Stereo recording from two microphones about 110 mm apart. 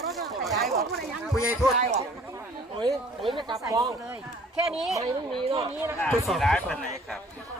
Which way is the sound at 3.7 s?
30° right (ahead or behind).